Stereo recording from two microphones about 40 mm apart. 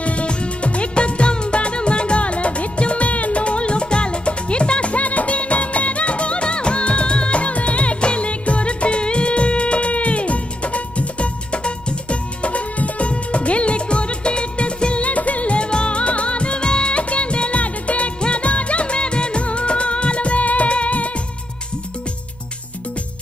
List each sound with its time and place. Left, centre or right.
0.0 s music of bollywood: left